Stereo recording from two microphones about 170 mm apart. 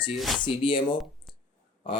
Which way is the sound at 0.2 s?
Centre (ahead or behind).